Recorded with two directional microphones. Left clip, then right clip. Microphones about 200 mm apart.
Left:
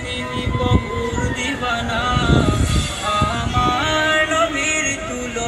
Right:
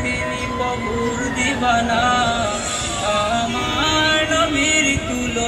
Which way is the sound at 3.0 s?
45° left (ahead or behind).